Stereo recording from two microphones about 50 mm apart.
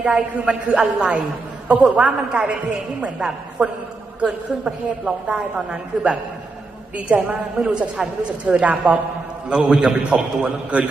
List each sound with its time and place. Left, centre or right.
0.0 s a woman's voice: right